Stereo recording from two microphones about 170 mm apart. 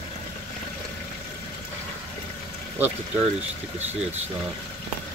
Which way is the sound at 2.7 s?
10° right (ahead or behind).